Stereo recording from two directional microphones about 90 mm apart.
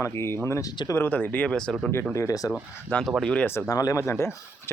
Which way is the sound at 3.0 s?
5° left (ahead or behind).